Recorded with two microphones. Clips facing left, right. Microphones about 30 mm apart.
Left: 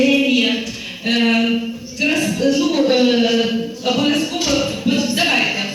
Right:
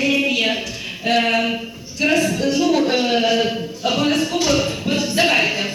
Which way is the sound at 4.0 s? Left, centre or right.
Left.